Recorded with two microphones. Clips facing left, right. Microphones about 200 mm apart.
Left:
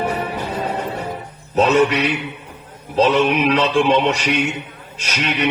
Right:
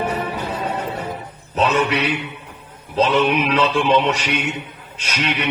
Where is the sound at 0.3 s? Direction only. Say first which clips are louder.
Left 1 dB; 40° left (ahead or behind).